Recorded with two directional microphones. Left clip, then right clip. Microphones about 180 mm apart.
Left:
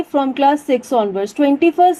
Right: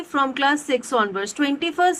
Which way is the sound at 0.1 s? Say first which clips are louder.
Left 5 dB; 30° left (ahead or behind).